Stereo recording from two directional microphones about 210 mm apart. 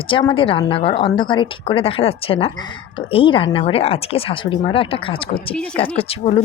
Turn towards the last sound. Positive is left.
turn(degrees=25)  # may be behind; listen again after turning